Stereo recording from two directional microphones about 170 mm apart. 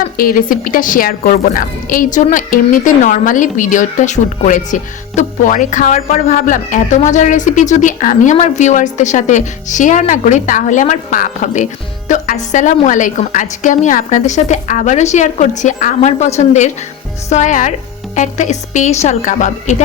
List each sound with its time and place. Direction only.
0.2 s a woman's voice: 55° left (ahead or behind)